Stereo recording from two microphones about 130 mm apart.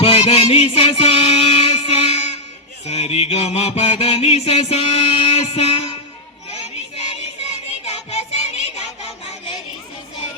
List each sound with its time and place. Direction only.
0.0 s music: 45° left (ahead or behind)
2.8 s mantra: 50° left (ahead or behind)
6.5 s child singing: 50° left (ahead or behind)
7.9 s music: 55° left (ahead or behind)